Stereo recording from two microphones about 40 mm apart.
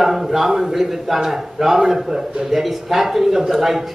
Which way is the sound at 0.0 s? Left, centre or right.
Centre.